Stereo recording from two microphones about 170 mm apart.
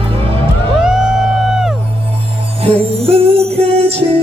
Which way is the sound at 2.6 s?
35° right (ahead or behind).